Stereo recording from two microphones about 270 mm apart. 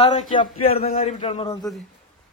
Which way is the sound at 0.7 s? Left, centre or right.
Left.